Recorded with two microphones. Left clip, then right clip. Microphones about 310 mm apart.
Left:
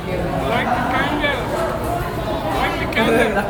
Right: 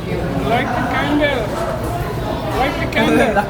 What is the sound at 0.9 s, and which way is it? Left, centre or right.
Vehicle, centre.